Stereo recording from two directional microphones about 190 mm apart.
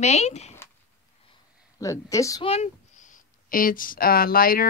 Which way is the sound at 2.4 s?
35° left (ahead or behind).